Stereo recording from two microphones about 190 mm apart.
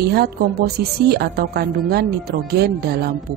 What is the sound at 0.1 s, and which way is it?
A woman's voice, 55° right (ahead or behind).